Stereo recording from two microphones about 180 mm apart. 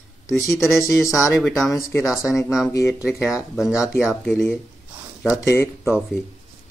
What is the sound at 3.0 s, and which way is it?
Speech, 5° right (ahead or behind).